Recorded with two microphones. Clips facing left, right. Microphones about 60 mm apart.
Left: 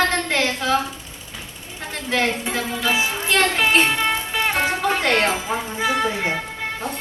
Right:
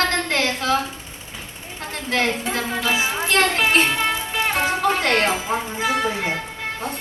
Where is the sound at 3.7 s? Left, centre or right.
Centre.